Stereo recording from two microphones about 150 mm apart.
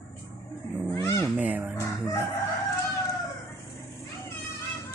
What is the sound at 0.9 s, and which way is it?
Cat, 20° left (ahead or behind).